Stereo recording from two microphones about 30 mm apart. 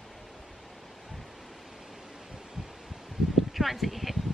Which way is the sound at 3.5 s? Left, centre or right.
Centre.